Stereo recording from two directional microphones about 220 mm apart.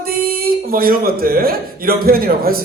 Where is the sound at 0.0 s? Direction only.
40° right (ahead or behind).